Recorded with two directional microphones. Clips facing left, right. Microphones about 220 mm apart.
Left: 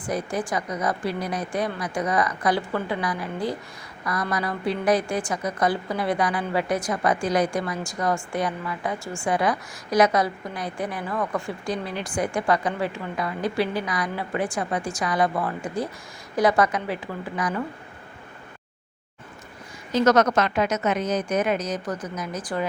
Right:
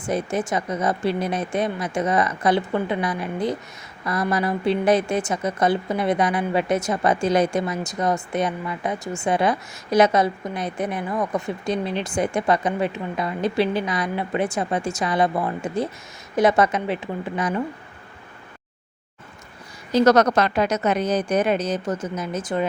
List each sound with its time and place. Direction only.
0.0 s speech: 25° right (ahead or behind)
19.9 s a woman's voice: 35° right (ahead or behind)